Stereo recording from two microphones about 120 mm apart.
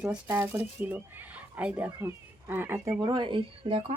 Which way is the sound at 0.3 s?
20° right (ahead or behind).